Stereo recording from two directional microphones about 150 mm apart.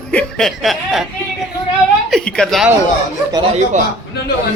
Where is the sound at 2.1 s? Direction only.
5° left (ahead or behind).